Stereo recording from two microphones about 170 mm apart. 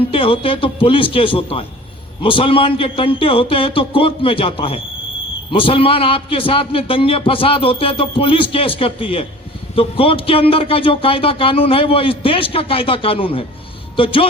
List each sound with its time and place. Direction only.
0.1 s a man's voice: 30° left (ahead or behind)